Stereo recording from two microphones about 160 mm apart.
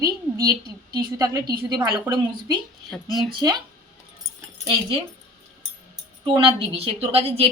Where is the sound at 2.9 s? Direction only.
Centre (ahead or behind).